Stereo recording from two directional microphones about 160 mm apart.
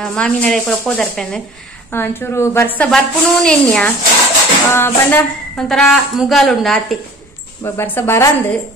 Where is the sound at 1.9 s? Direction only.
15° left (ahead or behind).